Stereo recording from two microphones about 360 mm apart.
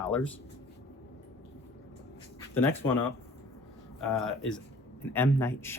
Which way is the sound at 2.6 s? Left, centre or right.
Centre.